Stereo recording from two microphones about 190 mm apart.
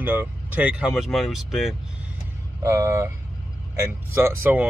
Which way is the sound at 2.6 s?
15° right (ahead or behind).